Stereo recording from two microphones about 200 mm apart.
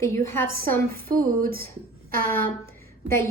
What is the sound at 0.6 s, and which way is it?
A woman's voice, 45° right (ahead or behind).